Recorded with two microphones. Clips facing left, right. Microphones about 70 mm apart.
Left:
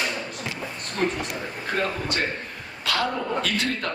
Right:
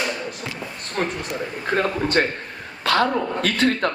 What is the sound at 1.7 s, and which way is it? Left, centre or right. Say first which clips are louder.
Speech: right 6 dB; right.